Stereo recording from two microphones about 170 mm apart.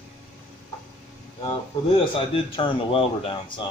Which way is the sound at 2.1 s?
30° left (ahead or behind).